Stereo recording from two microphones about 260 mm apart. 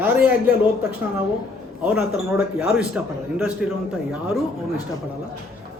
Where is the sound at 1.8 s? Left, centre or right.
Centre.